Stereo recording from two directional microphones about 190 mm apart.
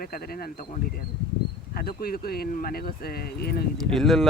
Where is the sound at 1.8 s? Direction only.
55° left (ahead or behind).